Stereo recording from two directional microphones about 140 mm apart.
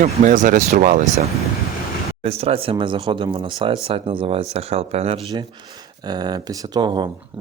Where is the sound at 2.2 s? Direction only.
45° right (ahead or behind).